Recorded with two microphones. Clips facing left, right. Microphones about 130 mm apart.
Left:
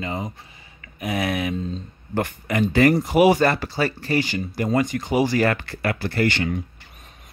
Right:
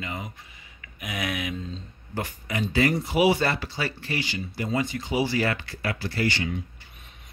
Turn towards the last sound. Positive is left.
turn(degrees=55)  # may be behind; listen again after turning